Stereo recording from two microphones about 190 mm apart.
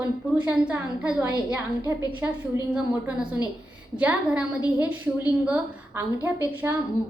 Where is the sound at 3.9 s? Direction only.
5° right (ahead or behind).